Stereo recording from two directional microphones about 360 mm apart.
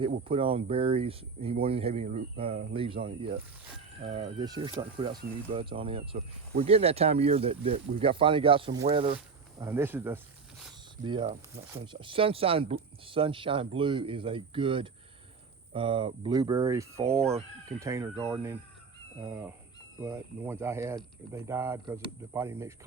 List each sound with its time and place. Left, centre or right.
0.0 s speech: centre